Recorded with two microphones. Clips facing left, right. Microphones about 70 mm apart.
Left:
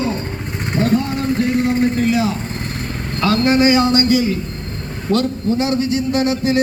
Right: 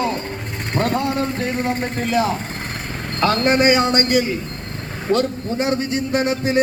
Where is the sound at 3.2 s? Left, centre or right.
Right.